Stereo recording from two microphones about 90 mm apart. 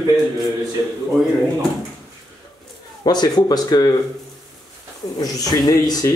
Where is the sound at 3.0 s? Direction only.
50° left (ahead or behind).